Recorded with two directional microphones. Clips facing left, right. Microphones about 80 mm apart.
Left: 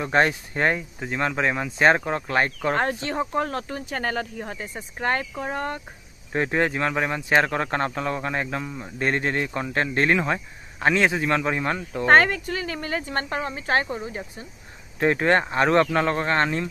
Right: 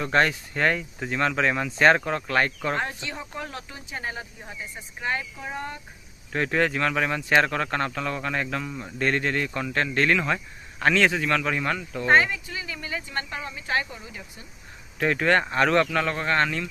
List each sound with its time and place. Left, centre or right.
0.0 s speech: centre
0.9 s speech: centre
2.7 s speech: left
4.0 s speech: left
6.3 s speech: left
7.4 s speech: left
8.9 s speech: left
12.1 s speech: left
15.0 s speech: left